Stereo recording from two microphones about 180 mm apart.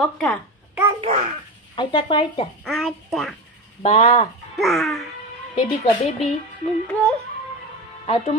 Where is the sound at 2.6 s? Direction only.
Centre (ahead or behind).